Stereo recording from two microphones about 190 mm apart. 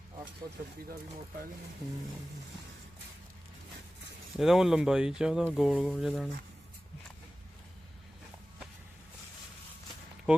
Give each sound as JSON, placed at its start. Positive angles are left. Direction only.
{"t": 4.4, "sound": "speech", "side_deg": 0}
{"t": 10.3, "sound": "speech", "side_deg": -5}